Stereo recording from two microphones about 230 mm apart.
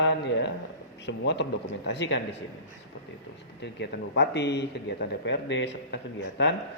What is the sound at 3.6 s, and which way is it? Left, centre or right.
Speech, left.